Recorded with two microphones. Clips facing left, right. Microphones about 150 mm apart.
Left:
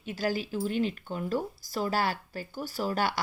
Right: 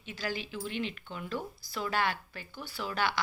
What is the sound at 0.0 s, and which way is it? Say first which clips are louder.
Speech: left 6 dB; 45° left (ahead or behind).